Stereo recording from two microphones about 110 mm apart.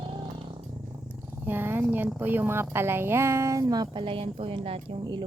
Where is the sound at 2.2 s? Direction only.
20° right (ahead or behind); by 4.8 s 55° right (ahead or behind).